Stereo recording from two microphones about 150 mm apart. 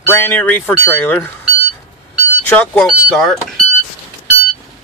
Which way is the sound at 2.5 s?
10° left (ahead or behind).